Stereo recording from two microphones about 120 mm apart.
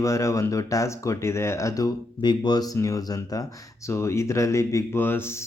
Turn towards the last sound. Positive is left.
turn(degrees=20)  # may be behind; listen again after turning